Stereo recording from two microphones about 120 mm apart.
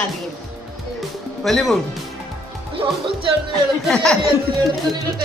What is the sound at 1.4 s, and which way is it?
Speech, centre (ahead or behind).